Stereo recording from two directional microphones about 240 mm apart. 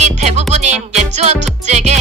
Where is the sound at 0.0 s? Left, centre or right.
Right.